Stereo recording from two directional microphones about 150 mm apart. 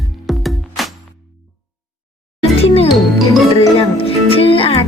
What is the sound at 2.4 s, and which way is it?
Music, 40° left (ahead or behind).